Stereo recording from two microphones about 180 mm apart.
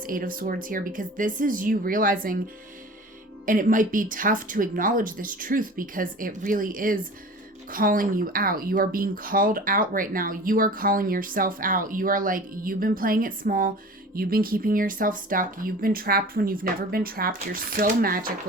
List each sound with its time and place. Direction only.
0.0 s speech: 50° right (ahead or behind)
3.4 s speech: 50° right (ahead or behind)